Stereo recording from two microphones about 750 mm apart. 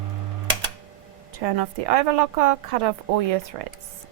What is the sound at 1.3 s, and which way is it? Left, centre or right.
A woman's voice, right.